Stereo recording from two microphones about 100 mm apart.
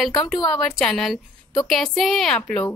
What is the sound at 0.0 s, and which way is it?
A woman's voice, 5° left (ahead or behind).